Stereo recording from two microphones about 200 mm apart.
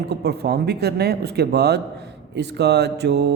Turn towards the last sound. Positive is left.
turn(degrees=-55)  # may be behind; listen again after turning